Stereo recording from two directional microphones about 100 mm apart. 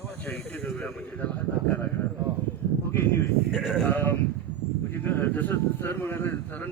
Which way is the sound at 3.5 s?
Centre (ahead or behind).